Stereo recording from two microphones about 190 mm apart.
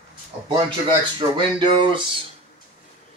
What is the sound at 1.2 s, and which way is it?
Speech, 25° right (ahead or behind).